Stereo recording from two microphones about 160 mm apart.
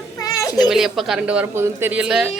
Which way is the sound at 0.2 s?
25° left (ahead or behind).